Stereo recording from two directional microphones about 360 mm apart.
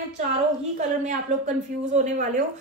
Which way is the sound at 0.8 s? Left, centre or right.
Centre.